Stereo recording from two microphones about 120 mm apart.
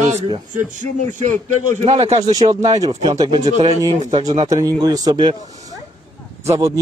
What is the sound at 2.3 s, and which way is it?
Speech, 35° right (ahead or behind).